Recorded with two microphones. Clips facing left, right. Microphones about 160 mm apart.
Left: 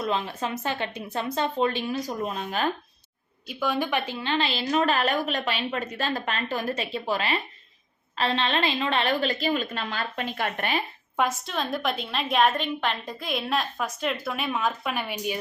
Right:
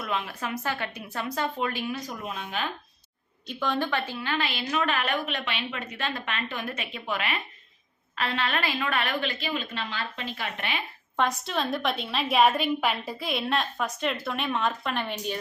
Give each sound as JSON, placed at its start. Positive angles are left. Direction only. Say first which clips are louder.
{"t": 0.0, "sound": "a woman's voice", "louder": "left 4 dB", "side_deg": 30}
{"t": 3.4, "sound": "a woman's voice", "louder": "left 1 dB", "side_deg": 5}
{"t": 11.2, "sound": "a woman's voice", "louder": "even", "side_deg": 0}